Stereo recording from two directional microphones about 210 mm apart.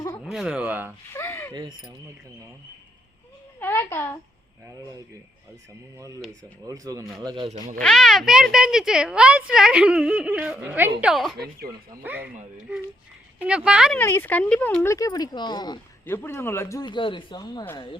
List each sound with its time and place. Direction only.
0.3 s speech: 5° right (ahead or behind)
1.1 s a sound: 10° left (ahead or behind)
3.6 s a woman's voice: 10° left (ahead or behind)
6.0 s speech: 15° right (ahead or behind)
7.8 s speech: centre (ahead or behind)
14.0 s speech: 10° left (ahead or behind)